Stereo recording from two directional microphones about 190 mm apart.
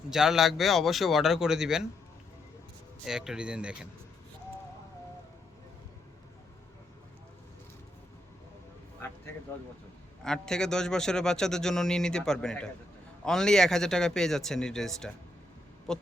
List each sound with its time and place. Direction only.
0.1 s a man's voice: centre (ahead or behind)
3.0 s a man's voice: 5° right (ahead or behind)
10.2 s a man's voice: 5° left (ahead or behind)